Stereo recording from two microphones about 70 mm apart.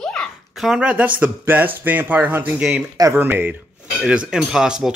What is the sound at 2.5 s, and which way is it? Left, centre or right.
Speech, centre.